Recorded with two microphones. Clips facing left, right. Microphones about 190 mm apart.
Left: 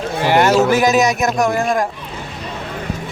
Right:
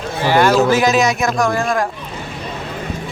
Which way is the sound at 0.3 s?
20° left (ahead or behind).